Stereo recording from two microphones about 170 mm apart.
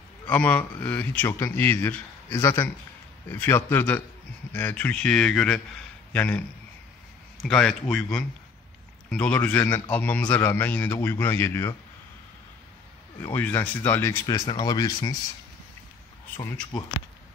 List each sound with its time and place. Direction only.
0.3 s a man's voice: 10° left (ahead or behind)
7.4 s a man's voice: 5° left (ahead or behind)
13.2 s a man's voice: 15° left (ahead or behind)